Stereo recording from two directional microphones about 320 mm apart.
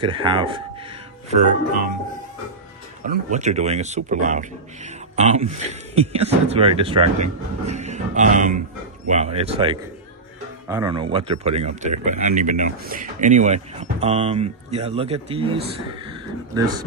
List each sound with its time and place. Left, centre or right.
0.0 s speech: centre
3.3 s speech: right